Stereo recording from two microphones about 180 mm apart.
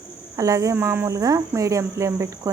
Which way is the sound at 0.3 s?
20° right (ahead or behind).